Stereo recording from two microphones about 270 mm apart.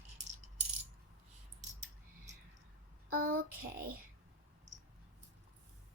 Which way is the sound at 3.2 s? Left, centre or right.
Right.